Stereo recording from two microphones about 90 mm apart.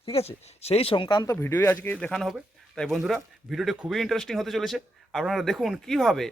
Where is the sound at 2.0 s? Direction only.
5° left (ahead or behind).